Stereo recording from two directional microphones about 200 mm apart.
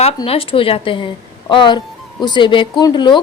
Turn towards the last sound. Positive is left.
turn(degrees=25)  # may be behind; listen again after turning